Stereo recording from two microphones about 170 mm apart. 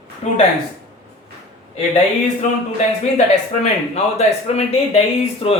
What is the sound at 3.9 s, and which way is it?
Speech, 40° left (ahead or behind).